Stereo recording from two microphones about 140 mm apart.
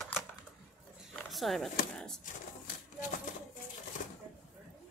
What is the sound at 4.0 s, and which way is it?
Shuffling cards, 65° left (ahead or behind).